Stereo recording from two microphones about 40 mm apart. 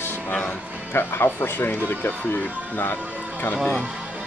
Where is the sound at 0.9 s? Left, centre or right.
Left.